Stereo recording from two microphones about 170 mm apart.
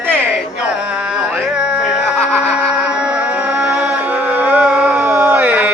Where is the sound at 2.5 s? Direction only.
5° right (ahead or behind).